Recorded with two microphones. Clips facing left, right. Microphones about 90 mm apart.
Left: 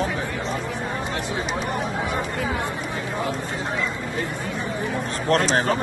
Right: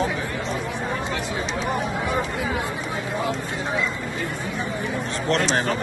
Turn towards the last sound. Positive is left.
turn(degrees=40)  # may be behind; listen again after turning